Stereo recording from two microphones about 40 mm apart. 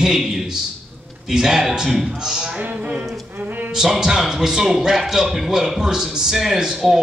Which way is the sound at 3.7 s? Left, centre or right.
Centre.